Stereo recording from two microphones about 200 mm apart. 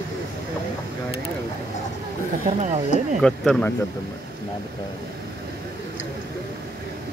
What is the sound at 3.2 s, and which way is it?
Speech, 5° left (ahead or behind).